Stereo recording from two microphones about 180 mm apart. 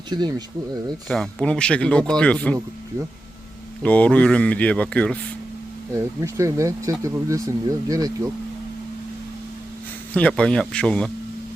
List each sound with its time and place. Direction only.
0.1 s speech: 25° right (ahead or behind)
1.0 s speech: centre (ahead or behind)
3.8 s speech: 10° left (ahead or behind)
5.9 s speech: 15° right (ahead or behind)
10.2 s speech: 5° left (ahead or behind)